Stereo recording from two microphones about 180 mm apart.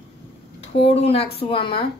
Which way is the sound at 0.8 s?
35° left (ahead or behind).